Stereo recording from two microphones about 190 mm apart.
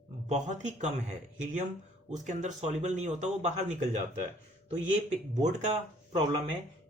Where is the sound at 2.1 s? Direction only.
40° right (ahead or behind).